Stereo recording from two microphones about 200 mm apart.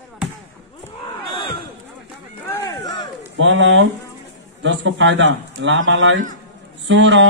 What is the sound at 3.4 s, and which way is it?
A man's voice, 65° right (ahead or behind).